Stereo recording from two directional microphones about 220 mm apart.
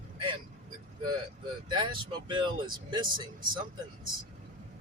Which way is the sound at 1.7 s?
20° right (ahead or behind).